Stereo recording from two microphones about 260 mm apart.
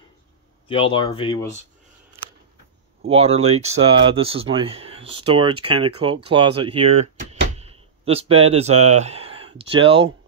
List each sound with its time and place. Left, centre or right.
0.7 s speech: left
3.1 s speech: right